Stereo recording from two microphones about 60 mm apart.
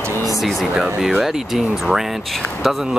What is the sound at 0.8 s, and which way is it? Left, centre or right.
Speech, centre.